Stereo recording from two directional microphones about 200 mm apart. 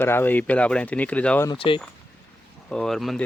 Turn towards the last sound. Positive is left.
turn(degrees=0)  # may be behind; listen again after turning